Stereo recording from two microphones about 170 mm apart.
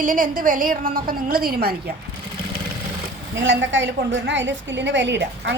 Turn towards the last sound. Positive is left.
turn(degrees=-90)